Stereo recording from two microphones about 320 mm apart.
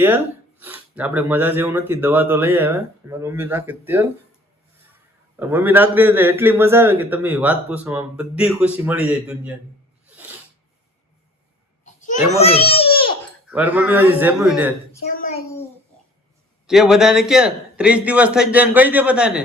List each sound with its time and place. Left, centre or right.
0.6 s speech: centre
5.4 s a man's voice: centre
11.9 s a sound: left
12.4 s a child's voice: centre
13.5 s a man's voice: centre
15.1 s a sound: left
16.6 s a man's voice: centre